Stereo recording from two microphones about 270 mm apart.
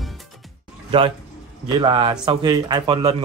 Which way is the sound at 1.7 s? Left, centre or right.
Centre.